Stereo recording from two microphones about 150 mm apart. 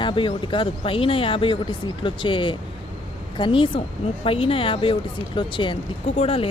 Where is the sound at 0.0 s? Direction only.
35° left (ahead or behind).